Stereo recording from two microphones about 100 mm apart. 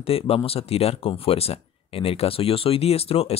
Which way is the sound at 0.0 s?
75° left (ahead or behind).